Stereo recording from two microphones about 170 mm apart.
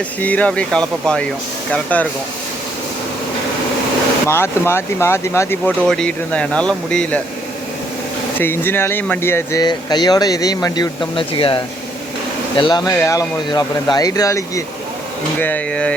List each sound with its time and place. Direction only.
0.2 s speech: 10° left (ahead or behind)
4.3 s speech: 15° left (ahead or behind)
8.4 s speech: 10° left (ahead or behind)